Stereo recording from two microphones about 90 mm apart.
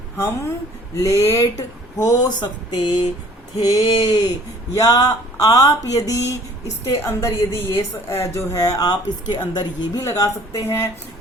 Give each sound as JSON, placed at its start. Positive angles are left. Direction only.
{"t": 0.9, "sound": "a woman's voice", "side_deg": 35}
{"t": 10.0, "sound": "a woman's voice", "side_deg": 35}